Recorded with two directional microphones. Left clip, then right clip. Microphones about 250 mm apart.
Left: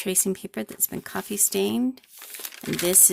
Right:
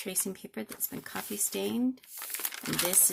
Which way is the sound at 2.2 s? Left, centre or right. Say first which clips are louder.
Even; centre.